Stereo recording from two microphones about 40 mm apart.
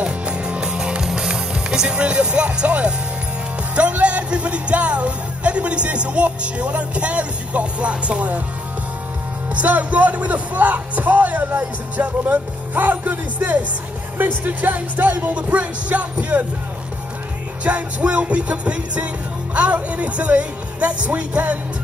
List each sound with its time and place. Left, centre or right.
0.0 s music: right
2.0 s speech: right
9.6 s speech: right
17.6 s speech: right